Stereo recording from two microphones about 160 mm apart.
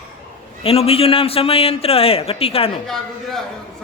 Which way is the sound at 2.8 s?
Centre (ahead or behind).